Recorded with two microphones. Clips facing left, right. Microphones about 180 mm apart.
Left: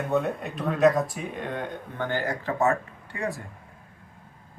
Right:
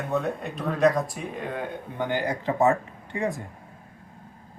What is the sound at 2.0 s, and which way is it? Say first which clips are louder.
Speech: right 2 dB; 15° right (ahead or behind).